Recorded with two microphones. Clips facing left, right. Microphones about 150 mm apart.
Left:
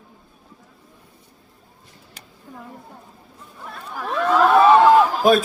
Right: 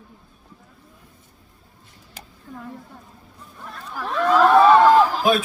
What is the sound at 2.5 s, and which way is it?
Speech, 10° left (ahead or behind).